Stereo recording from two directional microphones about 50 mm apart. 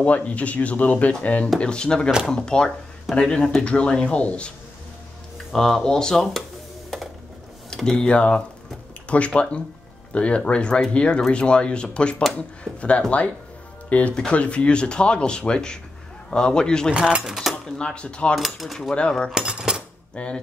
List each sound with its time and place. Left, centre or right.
0.0 s speech: left
1.6 s speech: centre
5.5 s speech: centre
7.7 s speech: centre
16.9 s speech: centre
17.6 s speech: centre
18.3 s speech: centre
18.9 s speech: centre
19.3 s cutlery: centre
20.2 s speech: left